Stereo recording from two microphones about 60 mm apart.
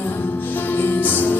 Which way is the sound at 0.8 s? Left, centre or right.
Left.